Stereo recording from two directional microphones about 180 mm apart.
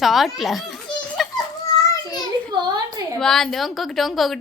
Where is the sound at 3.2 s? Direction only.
Centre (ahead or behind).